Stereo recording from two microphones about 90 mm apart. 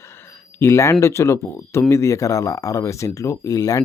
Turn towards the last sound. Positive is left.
turn(degrees=40)  # may be behind; listen again after turning